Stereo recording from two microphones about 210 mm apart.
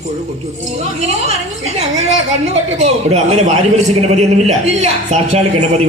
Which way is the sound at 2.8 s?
30° right (ahead or behind).